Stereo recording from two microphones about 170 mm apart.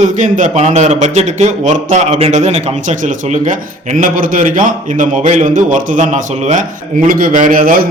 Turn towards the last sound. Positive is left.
turn(degrees=-55)  # may be behind; listen again after turning